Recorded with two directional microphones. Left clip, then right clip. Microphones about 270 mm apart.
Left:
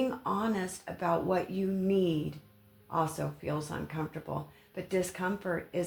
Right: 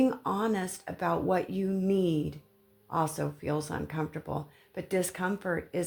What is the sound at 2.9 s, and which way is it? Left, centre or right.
Speech, right.